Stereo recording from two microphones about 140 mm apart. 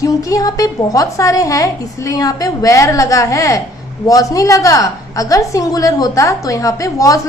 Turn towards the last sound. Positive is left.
turn(degrees=25)  # may be behind; listen again after turning